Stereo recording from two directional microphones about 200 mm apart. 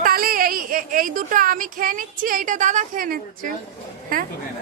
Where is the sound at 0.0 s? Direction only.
45° right (ahead or behind).